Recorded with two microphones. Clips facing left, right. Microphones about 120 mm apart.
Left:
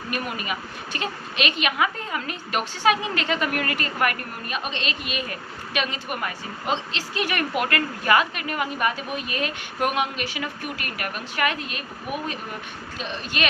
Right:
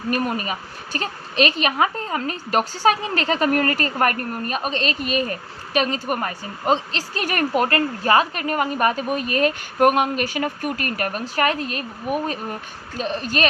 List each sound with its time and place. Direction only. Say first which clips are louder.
0.1 s a woman's voice: right 6 dB; 40° right (ahead or behind)
13.0 s a woman's voice: right 6 dB; 40° right (ahead or behind)